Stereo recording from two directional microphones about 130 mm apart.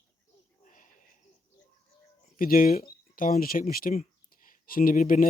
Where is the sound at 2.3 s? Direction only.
90° left.